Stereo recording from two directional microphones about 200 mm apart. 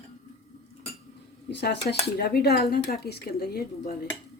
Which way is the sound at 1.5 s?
55° left (ahead or behind).